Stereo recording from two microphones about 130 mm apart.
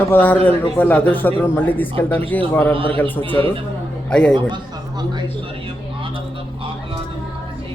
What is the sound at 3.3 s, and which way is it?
Speech, 45° right (ahead or behind).